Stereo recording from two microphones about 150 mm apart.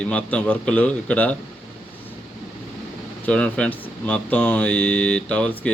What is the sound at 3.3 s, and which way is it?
Speech, 5° left (ahead or behind).